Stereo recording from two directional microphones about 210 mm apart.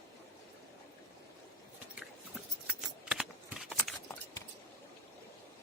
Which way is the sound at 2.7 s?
5° right (ahead or behind).